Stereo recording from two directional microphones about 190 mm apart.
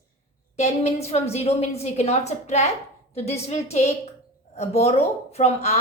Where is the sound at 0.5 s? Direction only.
35° left (ahead or behind).